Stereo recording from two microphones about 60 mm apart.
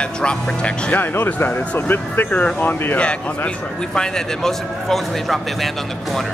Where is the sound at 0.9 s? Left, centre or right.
Left.